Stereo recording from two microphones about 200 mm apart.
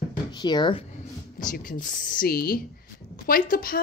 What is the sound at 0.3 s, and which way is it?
Speech, 20° left (ahead or behind).